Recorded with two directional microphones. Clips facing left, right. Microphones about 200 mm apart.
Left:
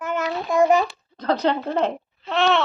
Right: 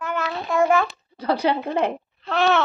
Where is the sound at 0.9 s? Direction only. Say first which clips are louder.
Even; 10° right (ahead or behind).